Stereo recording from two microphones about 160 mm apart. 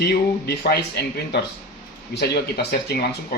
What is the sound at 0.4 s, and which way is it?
Speech, 85° left.